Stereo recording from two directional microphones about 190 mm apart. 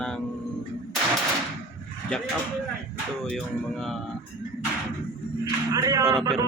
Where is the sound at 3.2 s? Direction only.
Centre (ahead or behind).